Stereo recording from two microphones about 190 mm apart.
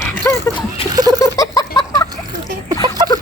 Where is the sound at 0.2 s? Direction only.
10° left (ahead or behind).